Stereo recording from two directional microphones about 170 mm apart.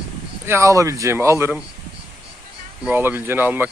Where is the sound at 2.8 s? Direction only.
10° right (ahead or behind).